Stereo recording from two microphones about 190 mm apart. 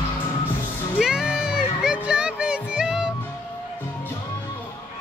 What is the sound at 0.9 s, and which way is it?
Music, 5° right (ahead or behind).